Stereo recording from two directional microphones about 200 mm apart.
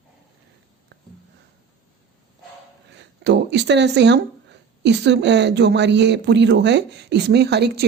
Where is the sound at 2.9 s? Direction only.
60° right (ahead or behind).